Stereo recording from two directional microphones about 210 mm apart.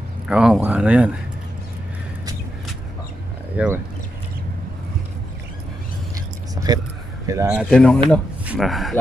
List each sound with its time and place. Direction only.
0.3 s speech: 5° right (ahead or behind)
3.5 s speech: 10° right (ahead or behind)
6.5 s a sound: 20° right (ahead or behind)
7.2 s speech: 15° right (ahead or behind)
7.7 s speech: 5° left (ahead or behind)